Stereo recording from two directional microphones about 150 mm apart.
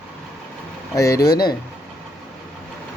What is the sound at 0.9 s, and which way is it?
Speech, 20° left (ahead or behind).